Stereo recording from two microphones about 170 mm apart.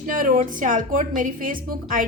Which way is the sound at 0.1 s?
55° right (ahead or behind).